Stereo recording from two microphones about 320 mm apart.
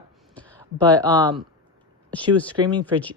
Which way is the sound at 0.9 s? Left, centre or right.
Centre.